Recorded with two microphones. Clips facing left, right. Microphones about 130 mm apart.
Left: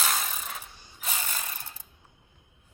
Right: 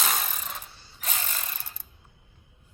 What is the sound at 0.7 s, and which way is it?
Ratchet, 15° left (ahead or behind).